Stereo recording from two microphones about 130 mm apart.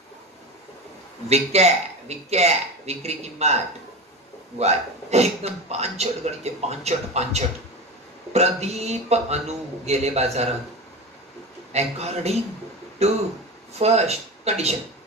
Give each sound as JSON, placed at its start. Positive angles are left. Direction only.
{"t": 1.3, "sound": "a man's voice", "side_deg": -55}
{"t": 11.7, "sound": "a man's voice", "side_deg": -55}